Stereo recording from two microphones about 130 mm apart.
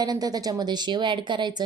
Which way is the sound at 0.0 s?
30° right (ahead or behind).